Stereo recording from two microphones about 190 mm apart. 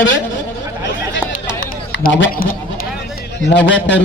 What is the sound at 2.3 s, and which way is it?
Speech, 50° left (ahead or behind).